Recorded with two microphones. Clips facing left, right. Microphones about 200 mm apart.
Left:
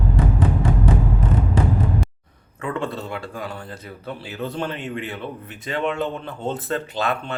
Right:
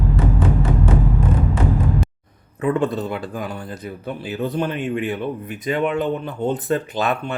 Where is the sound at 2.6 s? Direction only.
20° right (ahead or behind).